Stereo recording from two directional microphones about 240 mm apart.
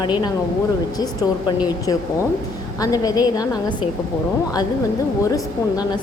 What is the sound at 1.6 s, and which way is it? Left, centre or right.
A woman's voice, centre.